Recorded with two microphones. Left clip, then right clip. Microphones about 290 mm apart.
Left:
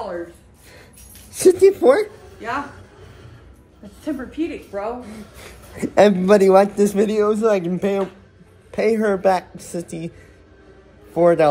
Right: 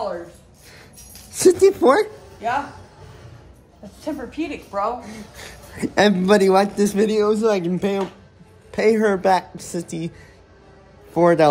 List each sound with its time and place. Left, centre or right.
1.3 s speech: centre
4.0 s a woman's voice: right
5.8 s a woman's voice: centre
11.1 s a woman's voice: centre